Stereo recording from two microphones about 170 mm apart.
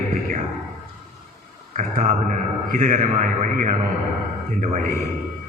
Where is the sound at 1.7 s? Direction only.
50° right (ahead or behind).